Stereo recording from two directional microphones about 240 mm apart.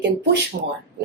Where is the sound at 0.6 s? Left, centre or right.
Right.